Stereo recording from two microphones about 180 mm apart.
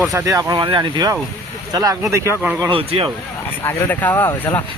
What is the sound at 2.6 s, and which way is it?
Speech, 30° right (ahead or behind).